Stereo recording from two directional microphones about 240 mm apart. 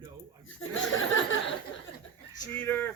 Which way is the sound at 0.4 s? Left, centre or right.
Left.